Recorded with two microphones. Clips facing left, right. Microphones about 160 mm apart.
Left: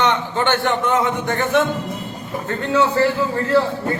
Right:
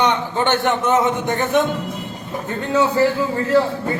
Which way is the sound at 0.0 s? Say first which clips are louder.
Even; 15° right (ahead or behind).